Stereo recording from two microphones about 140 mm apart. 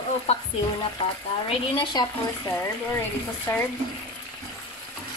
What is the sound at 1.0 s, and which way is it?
Speech, 40° left (ahead or behind).